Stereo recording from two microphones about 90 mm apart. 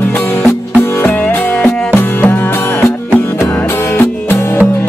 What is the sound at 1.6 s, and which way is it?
Music, 20° left (ahead or behind).